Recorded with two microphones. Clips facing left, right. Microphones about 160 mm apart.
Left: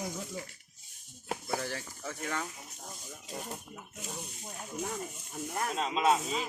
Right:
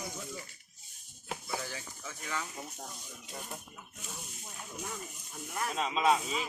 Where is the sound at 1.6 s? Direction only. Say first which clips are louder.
Left 4 dB; 60° left (ahead or behind).